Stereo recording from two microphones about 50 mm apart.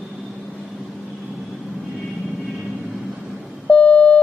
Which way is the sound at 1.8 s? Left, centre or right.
Centre.